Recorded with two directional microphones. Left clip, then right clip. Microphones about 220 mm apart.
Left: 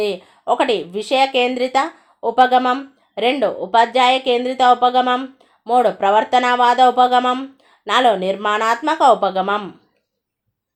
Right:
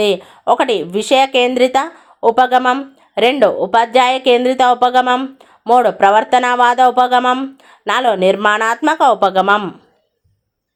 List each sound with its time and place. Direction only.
0.0 s speech: 30° right (ahead or behind)